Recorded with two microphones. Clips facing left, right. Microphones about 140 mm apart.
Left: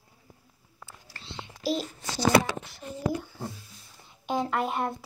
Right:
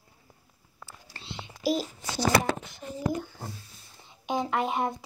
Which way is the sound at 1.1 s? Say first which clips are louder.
Even; 20° right (ahead or behind).